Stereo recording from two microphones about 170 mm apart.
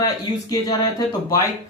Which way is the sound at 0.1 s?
20° left (ahead or behind).